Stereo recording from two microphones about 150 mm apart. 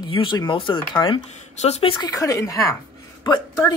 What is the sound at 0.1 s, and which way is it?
Speech, 30° left (ahead or behind).